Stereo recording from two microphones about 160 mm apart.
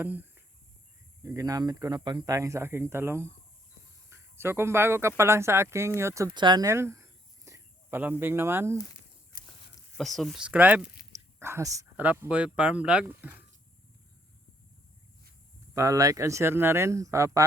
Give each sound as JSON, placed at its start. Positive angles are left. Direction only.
{"t": 0.0, "sound": "speech", "side_deg": -10}
{"t": 6.3, "sound": "a sound", "side_deg": -30}
{"t": 8.2, "sound": "speech", "side_deg": -15}
{"t": 10.0, "sound": "speech", "side_deg": 0}
{"t": 15.7, "sound": "speech", "side_deg": -20}